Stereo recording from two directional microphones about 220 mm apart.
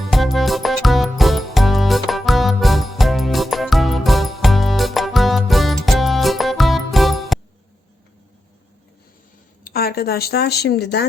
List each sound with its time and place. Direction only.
0.0 s music: centre (ahead or behind)
9.6 s speech: 45° left (ahead or behind)